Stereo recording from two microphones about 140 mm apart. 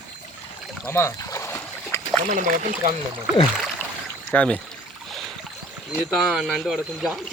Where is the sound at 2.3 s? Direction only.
60° right (ahead or behind).